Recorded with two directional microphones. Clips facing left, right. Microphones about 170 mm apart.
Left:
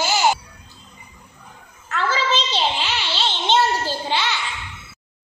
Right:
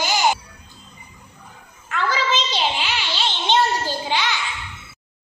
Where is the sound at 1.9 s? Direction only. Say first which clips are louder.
Even; 10° right (ahead or behind).